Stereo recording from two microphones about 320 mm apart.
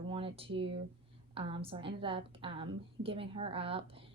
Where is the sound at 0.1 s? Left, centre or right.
Centre.